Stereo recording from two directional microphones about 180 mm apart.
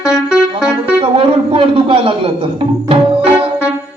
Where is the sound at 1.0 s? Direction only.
30° right (ahead or behind).